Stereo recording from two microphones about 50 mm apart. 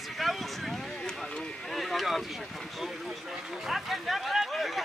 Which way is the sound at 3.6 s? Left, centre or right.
Centre.